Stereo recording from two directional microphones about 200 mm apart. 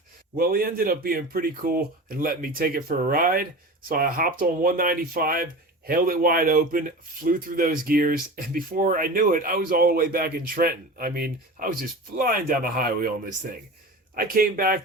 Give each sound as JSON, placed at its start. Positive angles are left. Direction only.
{"t": 0.3, "sound": "a man's voice", "side_deg": -45}
{"t": 14.2, "sound": "a man's voice", "side_deg": -45}